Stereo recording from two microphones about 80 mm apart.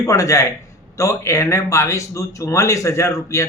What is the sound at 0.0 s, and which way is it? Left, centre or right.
Speech, left.